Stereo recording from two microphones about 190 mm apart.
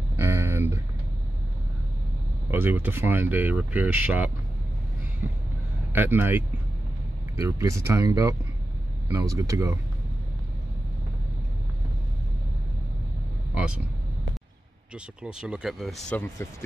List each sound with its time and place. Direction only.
0.1 s a sound: 15° right (ahead or behind)
2.5 s speech: 10° right (ahead or behind)
5.9 s speech: 10° right (ahead or behind)
15.2 s speech: 5° right (ahead or behind)